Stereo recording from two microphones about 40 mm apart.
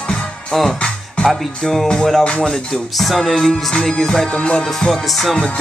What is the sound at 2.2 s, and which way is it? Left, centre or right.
Music, left.